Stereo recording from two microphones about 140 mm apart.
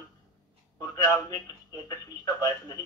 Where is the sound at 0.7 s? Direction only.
25° left (ahead or behind).